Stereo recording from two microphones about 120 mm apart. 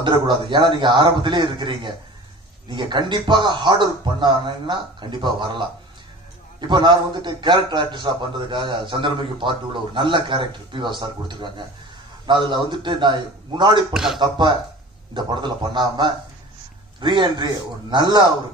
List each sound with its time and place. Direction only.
0.0 s a man's voice: 40° right (ahead or behind)
6.7 s a man's voice: 40° right (ahead or behind)
13.9 s speech: 5° right (ahead or behind)
15.1 s a man's voice: 40° right (ahead or behind)